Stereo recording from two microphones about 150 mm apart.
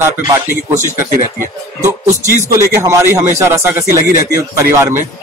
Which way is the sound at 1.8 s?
15° right (ahead or behind).